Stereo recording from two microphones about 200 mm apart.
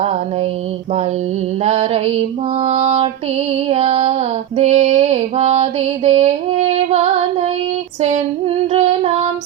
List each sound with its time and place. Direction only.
1.6 s female singing: 30° right (ahead or behind)
8.7 s music: 30° right (ahead or behind)